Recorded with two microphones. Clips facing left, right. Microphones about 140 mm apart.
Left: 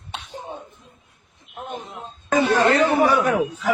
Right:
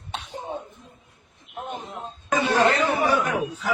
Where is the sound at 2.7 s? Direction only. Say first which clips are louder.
Left 4 dB; 50° left (ahead or behind).